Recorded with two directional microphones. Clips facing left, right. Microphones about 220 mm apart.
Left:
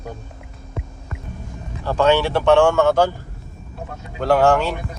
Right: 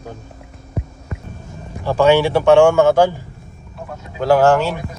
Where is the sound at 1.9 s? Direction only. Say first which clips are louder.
Right 4 dB; 10° right (ahead or behind).